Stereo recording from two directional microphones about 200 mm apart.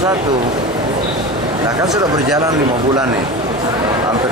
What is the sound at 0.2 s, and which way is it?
Speech, 20° right (ahead or behind).